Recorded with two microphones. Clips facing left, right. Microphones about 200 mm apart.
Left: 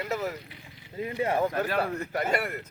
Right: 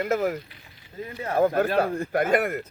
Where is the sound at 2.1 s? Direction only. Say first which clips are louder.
Right 8 dB; 50° right (ahead or behind).